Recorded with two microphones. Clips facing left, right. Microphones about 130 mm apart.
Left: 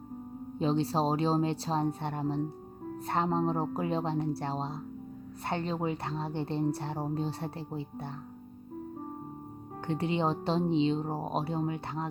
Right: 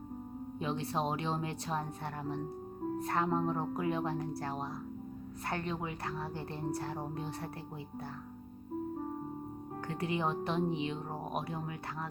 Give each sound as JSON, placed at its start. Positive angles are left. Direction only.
{"t": 0.6, "sound": "speech", "side_deg": 30}
{"t": 9.8, "sound": "speech", "side_deg": 25}